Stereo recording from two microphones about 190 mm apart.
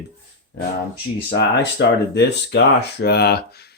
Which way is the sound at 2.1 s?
65° left (ahead or behind).